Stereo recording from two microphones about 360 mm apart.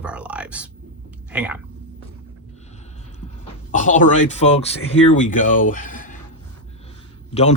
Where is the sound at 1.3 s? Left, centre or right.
Centre.